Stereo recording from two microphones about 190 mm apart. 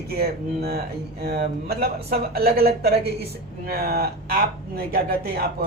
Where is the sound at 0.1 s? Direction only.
55° right (ahead or behind).